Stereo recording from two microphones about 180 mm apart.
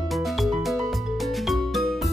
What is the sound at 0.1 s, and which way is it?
Music, centre (ahead or behind).